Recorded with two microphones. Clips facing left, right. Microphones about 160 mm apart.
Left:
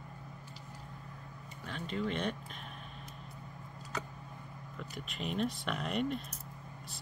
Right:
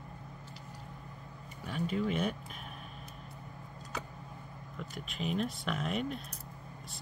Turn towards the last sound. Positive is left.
turn(degrees=0)  # may be behind; listen again after turning